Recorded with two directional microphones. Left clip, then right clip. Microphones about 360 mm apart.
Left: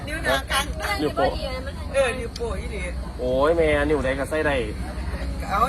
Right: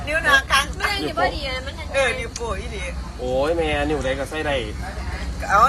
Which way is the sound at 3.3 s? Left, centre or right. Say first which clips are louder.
Left 1 dB; centre.